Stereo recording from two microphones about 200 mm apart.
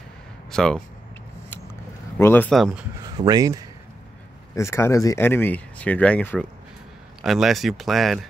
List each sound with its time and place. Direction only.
0.5 s speech: centre (ahead or behind)
2.1 s speech: 10° left (ahead or behind)
3.2 s speech: 20° right (ahead or behind)
4.6 s speech: 15° left (ahead or behind)